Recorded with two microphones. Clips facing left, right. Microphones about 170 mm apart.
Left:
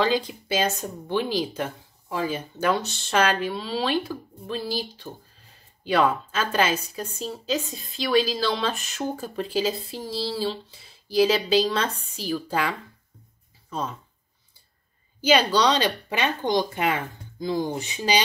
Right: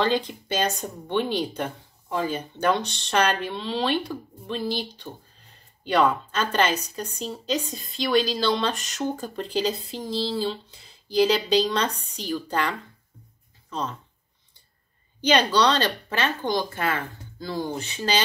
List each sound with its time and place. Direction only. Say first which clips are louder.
0.0 s a woman's voice: even; 5° left (ahead or behind)
15.2 s speech: even; 10° left (ahead or behind)